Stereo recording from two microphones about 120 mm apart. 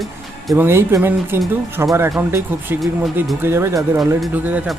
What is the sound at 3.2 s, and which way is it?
Speech, 20° right (ahead or behind).